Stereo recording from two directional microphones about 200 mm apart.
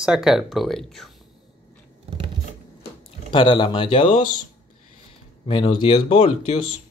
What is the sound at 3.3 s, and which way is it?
Speech, 25° left (ahead or behind).